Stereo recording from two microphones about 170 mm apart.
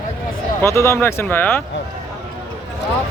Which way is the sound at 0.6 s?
15° left (ahead or behind).